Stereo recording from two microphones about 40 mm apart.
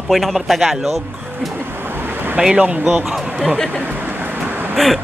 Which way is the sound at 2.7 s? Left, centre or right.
Right.